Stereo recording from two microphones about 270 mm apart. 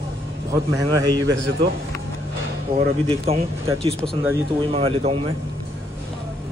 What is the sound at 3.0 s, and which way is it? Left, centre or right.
Speech, right.